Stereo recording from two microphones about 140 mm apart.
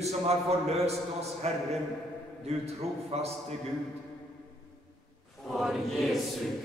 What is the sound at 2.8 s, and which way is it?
Speech, 50° right (ahead or behind).